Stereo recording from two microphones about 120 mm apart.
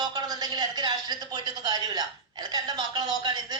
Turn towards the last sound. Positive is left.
turn(degrees=-35)  # may be behind; listen again after turning